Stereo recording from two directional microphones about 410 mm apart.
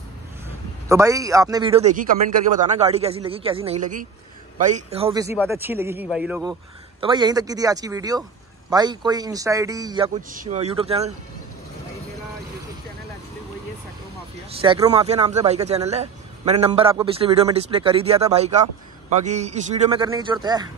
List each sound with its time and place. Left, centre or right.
0.8 s a man's voice: centre
14.6 s speech: centre